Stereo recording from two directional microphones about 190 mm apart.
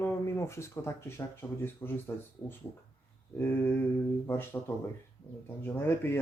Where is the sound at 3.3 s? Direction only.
10° left (ahead or behind).